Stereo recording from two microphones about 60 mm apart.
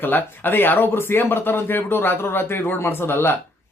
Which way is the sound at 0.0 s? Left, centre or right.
Left.